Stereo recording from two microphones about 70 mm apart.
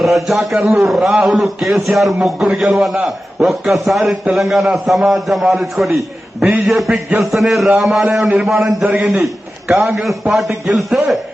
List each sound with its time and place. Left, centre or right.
0.0 s a man's voice: centre
8.8 s a man's voice: centre
9.2 s a man's voice: centre